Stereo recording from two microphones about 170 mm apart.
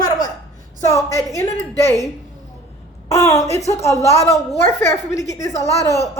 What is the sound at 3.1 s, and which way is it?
A woman's voice, 20° left (ahead or behind).